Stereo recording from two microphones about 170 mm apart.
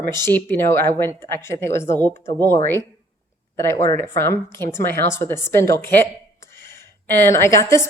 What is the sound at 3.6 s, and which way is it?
A woman's voice, 15° left (ahead or behind).